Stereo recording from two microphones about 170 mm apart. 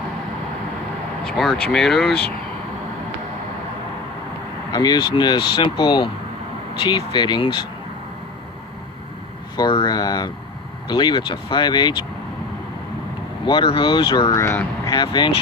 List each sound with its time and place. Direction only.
1.2 s speech: 5° left (ahead or behind)
4.7 s speech: 25° left (ahead or behind)
9.6 s speech: 25° left (ahead or behind)
13.4 s speech: 30° left (ahead or behind); by 14.9 s 15° left (ahead or behind)
14.9 s speech: 25° left (ahead or behind)